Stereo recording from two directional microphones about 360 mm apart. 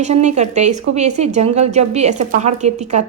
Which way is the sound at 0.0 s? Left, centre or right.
Centre.